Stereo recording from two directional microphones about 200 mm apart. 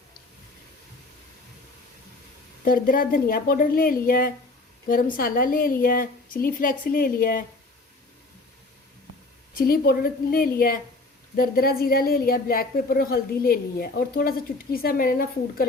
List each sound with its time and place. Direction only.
2.6 s a woman's voice: 45° left (ahead or behind)
9.6 s a woman's voice: 50° left (ahead or behind)